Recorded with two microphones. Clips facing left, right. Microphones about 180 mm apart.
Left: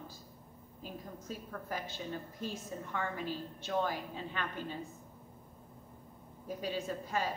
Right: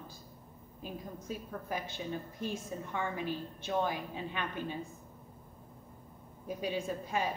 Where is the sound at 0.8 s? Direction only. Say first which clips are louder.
Right 3 dB; 15° right (ahead or behind).